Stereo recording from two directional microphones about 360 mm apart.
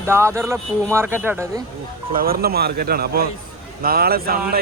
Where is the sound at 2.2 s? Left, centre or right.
Right.